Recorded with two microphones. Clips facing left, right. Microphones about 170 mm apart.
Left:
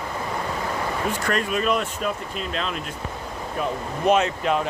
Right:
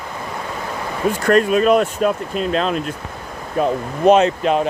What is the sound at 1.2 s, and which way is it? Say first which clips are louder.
Speech: right 11 dB; 45° right (ahead or behind).